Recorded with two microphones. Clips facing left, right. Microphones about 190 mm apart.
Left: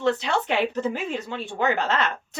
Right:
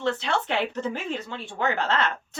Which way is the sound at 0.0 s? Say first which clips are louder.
Left 3 dB; 15° left (ahead or behind).